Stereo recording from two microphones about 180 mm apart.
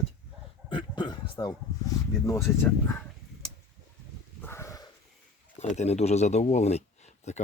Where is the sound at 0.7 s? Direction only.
25° left (ahead or behind).